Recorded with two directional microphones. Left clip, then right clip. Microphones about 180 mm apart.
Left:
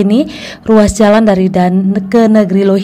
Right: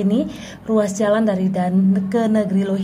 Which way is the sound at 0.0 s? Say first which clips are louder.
Left 9 dB; 30° left (ahead or behind).